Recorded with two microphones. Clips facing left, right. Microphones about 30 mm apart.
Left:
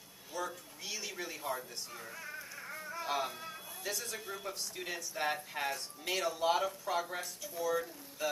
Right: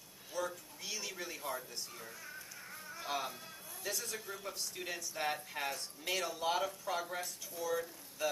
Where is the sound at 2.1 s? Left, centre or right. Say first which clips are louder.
Left 4 dB; left.